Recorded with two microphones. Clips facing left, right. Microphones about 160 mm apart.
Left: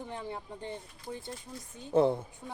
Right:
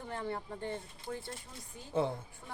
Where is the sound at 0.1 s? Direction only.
15° left (ahead or behind).